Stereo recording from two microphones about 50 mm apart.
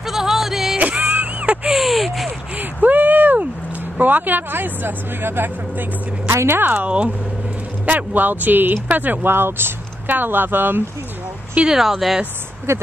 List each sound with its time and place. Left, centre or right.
0.0 s music: centre
1.0 s a sound: right
1.7 s crow: centre
2.5 s a sound: right
4.0 s speech: right
6.2 s a woman's voice: right
6.6 s speech: right
6.9 s speech: right
11.6 s speech: centre
12.7 s a woman's voice: right